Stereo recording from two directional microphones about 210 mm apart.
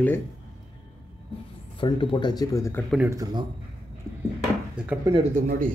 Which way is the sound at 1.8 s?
25° left (ahead or behind).